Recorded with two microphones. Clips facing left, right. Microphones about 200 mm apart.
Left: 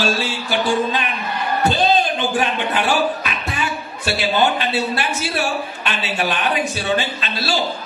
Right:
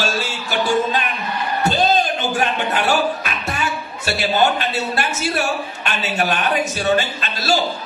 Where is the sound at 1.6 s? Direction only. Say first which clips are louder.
Even; 45° right (ahead or behind).